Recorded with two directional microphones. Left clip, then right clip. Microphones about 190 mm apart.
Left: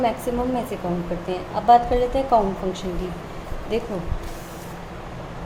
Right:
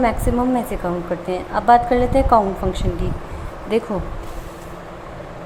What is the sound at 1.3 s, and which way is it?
A woman's voice, 20° right (ahead or behind).